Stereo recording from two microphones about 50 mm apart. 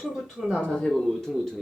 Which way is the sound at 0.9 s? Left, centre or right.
Centre.